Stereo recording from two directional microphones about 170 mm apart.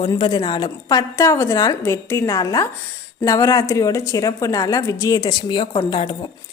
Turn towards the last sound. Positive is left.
turn(degrees=30)  # may be behind; listen again after turning